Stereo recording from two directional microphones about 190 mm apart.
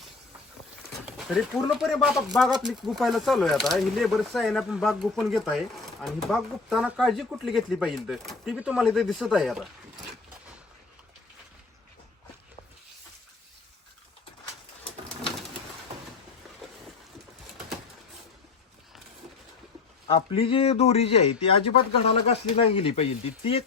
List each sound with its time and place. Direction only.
1.0 s speech: centre (ahead or behind)
20.1 s speech: 30° left (ahead or behind)